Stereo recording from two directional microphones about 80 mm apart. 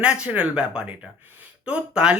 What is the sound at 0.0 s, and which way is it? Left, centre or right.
Speech, centre.